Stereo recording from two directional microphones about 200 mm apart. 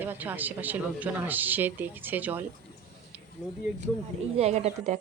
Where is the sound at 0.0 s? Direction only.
10° right (ahead or behind).